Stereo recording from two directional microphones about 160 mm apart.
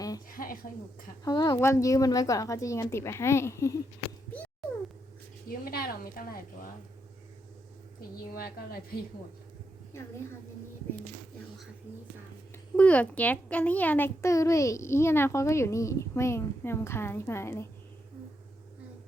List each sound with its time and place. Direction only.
0.3 s a sound: 60° left (ahead or behind)
1.2 s a woman's voice: 25° left (ahead or behind)
5.5 s a woman's voice: 65° left (ahead or behind)
8.4 s a woman's voice: 70° left (ahead or behind)
11.9 s speech: 10° right (ahead or behind)
12.7 s a child's voice: 10° left (ahead or behind)